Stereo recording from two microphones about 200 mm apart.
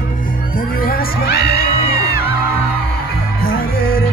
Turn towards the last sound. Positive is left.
turn(degrees=50)  # may be behind; listen again after turning